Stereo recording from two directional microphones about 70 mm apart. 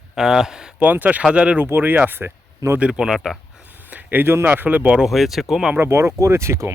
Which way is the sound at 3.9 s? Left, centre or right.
Right.